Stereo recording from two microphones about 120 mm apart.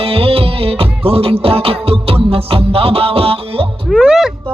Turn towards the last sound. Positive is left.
turn(degrees=-5)  # may be behind; listen again after turning